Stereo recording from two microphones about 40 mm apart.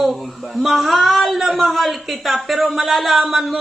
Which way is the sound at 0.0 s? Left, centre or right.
Centre.